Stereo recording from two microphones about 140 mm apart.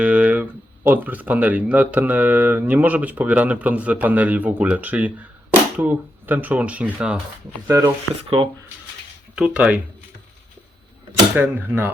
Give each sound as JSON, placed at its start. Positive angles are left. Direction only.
{"t": 0.0, "sound": "a sound", "side_deg": -10}
{"t": 0.9, "sound": "speech", "side_deg": -15}
{"t": 7.9, "sound": "speech", "side_deg": -40}
{"t": 9.3, "sound": "speech", "side_deg": -10}
{"t": 11.3, "sound": "speech", "side_deg": -15}